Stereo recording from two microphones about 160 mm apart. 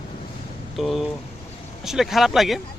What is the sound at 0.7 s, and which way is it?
Speech, centre (ahead or behind).